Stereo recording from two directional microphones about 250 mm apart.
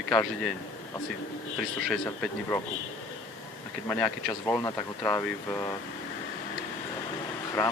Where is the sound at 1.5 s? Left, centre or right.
Centre.